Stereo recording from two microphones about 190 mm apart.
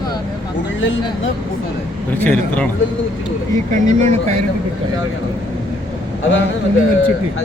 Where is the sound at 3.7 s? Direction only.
40° right (ahead or behind).